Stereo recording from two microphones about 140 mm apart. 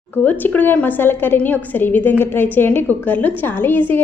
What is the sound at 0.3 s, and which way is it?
A woman's voice, 15° left (ahead or behind).